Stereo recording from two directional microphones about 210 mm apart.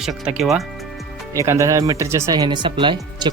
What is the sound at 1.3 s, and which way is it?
Speech, 15° right (ahead or behind).